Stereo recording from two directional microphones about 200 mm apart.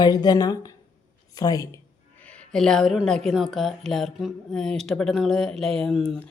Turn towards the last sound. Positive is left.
turn(degrees=0)  # may be behind; listen again after turning